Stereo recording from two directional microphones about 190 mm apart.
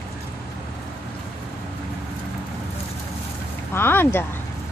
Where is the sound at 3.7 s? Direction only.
10° left (ahead or behind).